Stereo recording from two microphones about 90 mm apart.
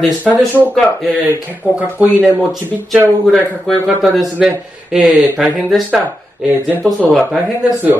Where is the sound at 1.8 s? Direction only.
15° right (ahead or behind).